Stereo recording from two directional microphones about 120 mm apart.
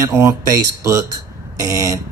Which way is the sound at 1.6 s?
25° right (ahead or behind).